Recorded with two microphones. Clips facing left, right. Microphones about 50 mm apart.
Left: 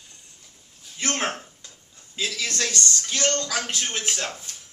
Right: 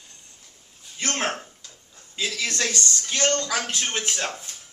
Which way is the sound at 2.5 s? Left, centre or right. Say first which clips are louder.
Even; centre.